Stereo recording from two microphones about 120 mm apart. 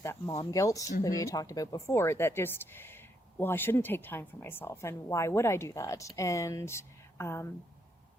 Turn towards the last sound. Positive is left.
turn(degrees=20)  # may be behind; listen again after turning